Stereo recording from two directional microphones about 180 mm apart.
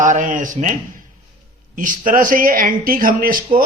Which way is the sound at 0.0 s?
45° right (ahead or behind).